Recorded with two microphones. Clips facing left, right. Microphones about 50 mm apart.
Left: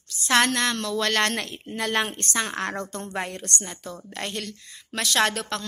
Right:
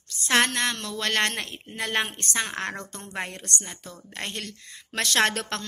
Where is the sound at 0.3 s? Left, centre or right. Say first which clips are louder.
Left 2 dB; right.